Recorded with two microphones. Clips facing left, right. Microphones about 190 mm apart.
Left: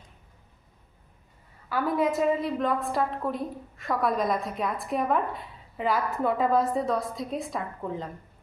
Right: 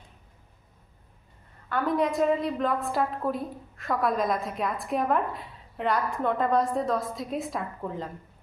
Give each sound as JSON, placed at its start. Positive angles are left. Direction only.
{"t": 1.7, "sound": "a woman's voice", "side_deg": 5}